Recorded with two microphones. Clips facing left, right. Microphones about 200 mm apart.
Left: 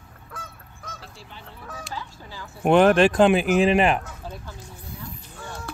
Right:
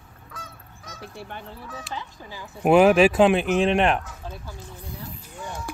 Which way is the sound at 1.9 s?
20° right (ahead or behind).